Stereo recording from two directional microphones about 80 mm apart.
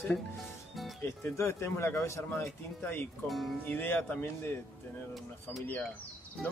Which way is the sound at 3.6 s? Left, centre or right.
Left.